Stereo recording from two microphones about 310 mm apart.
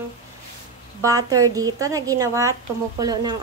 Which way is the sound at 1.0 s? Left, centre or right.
Centre.